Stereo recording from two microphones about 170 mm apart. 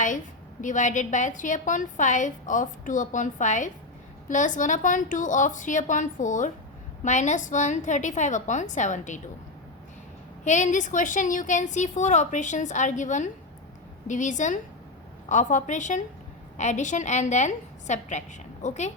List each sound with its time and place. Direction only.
0.6 s a woman's voice: 45° left (ahead or behind)
10.4 s a woman's voice: 45° left (ahead or behind)